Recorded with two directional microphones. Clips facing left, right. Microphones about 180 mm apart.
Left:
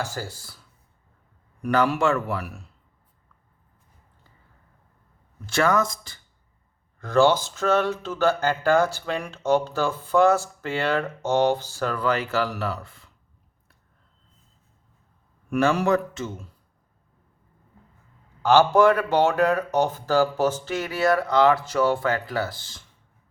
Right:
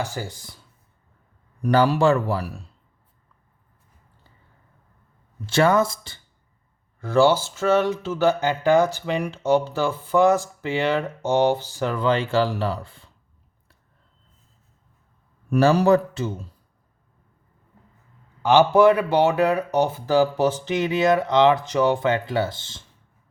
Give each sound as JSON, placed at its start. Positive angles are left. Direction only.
{"t": 0.0, "sound": "speech", "side_deg": -15}
{"t": 1.6, "sound": "speech", "side_deg": -35}
{"t": 5.5, "sound": "speech", "side_deg": -30}
{"t": 7.0, "sound": "speech", "side_deg": -10}
{"t": 15.4, "sound": "speech", "side_deg": -35}
{"t": 18.4, "sound": "speech", "side_deg": -15}